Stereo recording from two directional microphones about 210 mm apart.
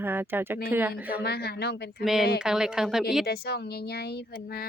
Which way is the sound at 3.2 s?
45° left (ahead or behind).